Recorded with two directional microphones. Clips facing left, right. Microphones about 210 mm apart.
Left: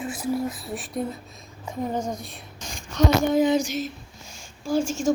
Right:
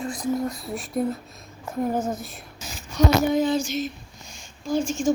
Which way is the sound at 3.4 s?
15° left (ahead or behind).